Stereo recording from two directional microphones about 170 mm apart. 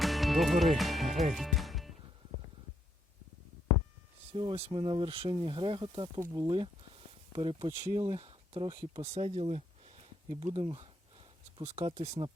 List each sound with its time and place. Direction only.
0.0 s music: centre (ahead or behind)
4.3 s speech: 35° right (ahead or behind)